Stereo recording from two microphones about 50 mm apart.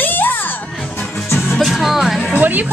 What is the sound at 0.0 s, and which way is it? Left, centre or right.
Music, left.